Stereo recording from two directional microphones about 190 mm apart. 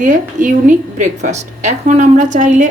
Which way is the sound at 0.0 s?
45° right (ahead or behind).